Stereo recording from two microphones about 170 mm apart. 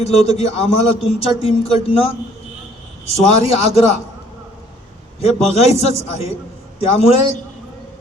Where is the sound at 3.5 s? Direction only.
35° left (ahead or behind).